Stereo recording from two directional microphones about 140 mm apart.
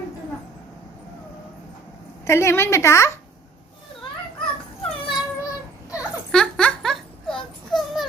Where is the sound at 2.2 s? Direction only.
20° left (ahead or behind).